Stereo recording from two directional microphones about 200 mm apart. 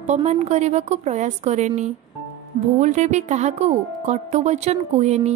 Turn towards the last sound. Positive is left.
turn(degrees=-35)  # may be behind; listen again after turning